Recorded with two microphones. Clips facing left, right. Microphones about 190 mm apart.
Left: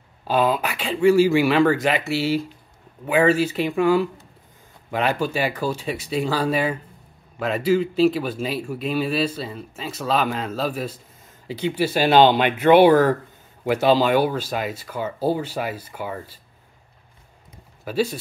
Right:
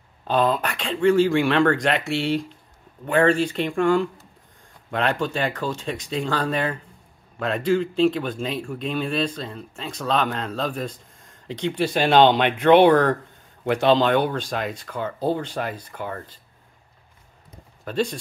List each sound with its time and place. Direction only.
0.3 s speech: 5° left (ahead or behind)
17.8 s speech: 5° left (ahead or behind)